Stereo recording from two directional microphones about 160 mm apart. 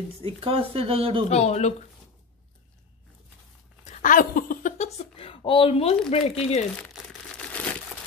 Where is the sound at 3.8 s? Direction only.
50° left (ahead or behind).